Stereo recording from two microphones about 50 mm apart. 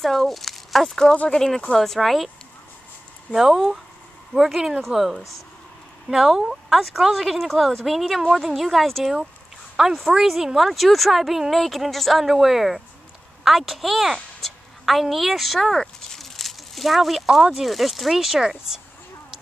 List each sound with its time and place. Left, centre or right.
0.0 s speech: centre
3.3 s a woman's voice: centre
4.8 s a woman's voice: centre
9.0 s a woman's voice: centre